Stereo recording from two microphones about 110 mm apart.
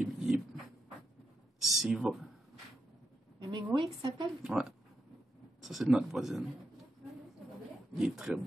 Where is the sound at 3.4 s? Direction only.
40° right (ahead or behind).